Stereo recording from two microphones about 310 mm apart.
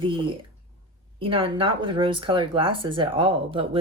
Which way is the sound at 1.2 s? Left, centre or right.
Centre.